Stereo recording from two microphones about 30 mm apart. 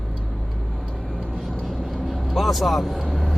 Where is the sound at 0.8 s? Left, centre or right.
Left.